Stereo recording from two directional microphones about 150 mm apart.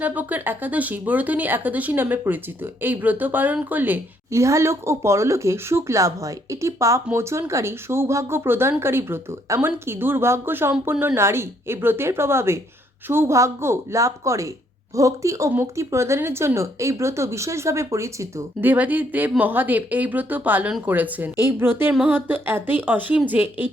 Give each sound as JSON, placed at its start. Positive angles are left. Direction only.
{"t": 0.0, "sound": "a woman's voice", "side_deg": -10}